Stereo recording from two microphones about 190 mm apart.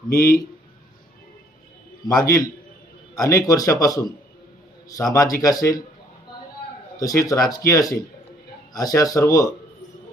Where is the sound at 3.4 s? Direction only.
20° left (ahead or behind).